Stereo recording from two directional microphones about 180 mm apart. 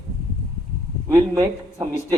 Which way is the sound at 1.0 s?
20° right (ahead or behind).